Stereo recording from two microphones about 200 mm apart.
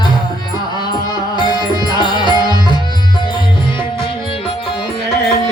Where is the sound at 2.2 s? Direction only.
20° right (ahead or behind).